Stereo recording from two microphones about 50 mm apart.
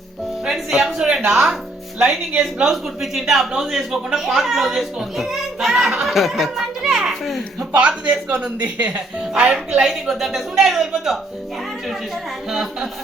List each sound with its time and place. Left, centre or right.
0.4 s speech: centre
2.7 s a child's voice: centre
7.7 s speech: right
9.8 s speech: centre
12.5 s speech: centre